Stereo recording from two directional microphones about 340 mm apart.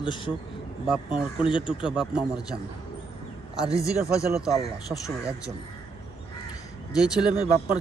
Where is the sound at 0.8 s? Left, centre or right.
Centre.